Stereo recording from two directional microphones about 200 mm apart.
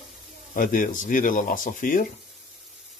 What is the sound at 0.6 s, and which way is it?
Speech, 40° left (ahead or behind).